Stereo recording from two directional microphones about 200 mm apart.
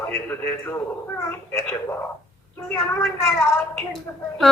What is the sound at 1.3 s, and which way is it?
A woman's voice, 15° left (ahead or behind).